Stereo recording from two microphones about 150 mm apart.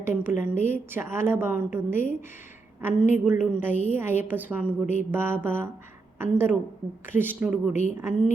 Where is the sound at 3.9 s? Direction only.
15° right (ahead or behind).